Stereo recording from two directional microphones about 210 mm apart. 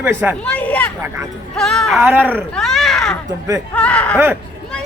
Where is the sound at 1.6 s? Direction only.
Centre (ahead or behind).